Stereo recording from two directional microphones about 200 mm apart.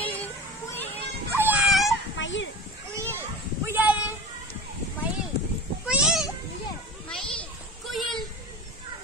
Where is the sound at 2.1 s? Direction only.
65° left (ahead or behind).